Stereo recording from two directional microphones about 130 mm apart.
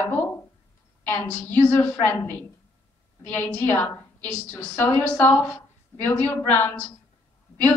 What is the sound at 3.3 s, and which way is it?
A woman's voice, 15° left (ahead or behind).